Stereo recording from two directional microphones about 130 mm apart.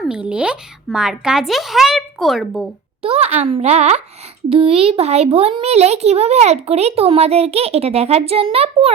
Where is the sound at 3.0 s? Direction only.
50° right (ahead or behind).